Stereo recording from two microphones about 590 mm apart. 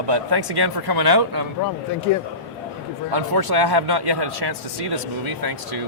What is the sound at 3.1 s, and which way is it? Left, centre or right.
Speech, right.